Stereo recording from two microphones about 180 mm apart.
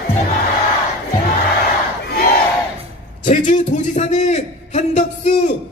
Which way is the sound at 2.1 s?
60° left (ahead or behind).